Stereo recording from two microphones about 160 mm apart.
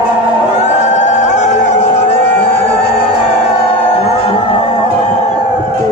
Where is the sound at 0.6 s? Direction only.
50° left (ahead or behind).